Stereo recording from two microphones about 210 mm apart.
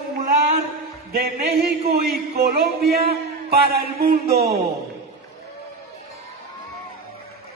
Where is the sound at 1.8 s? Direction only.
45° right (ahead or behind).